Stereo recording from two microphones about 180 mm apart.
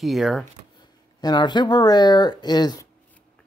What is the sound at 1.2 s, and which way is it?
Speech, 25° left (ahead or behind).